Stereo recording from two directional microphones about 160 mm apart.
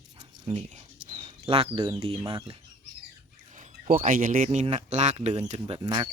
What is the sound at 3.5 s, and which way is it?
Speech, 55° right (ahead or behind).